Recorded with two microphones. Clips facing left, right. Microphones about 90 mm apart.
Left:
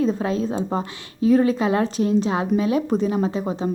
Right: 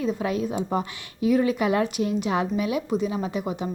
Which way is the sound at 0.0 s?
35° left (ahead or behind).